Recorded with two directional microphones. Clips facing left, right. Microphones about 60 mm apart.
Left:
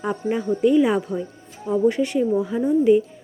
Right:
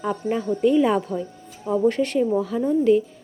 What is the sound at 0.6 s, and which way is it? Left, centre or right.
Speech, centre.